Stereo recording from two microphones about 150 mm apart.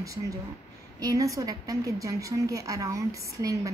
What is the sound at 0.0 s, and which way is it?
A woman's voice, 20° right (ahead or behind).